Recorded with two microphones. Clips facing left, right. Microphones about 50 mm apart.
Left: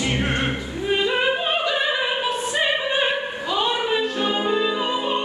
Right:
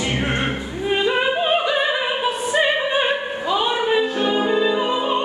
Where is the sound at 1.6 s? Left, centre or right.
Centre.